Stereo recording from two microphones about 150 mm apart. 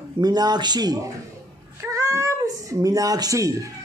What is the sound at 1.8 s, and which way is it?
Cat, 20° right (ahead or behind).